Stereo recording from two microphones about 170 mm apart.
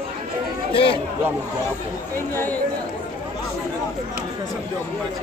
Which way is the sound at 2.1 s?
10° left (ahead or behind).